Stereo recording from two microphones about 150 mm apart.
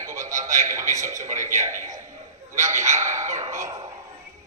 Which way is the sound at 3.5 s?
20° right (ahead or behind).